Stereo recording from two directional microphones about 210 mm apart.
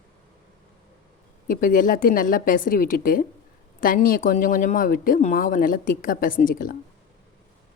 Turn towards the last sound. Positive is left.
turn(degrees=40)  # may be behind; listen again after turning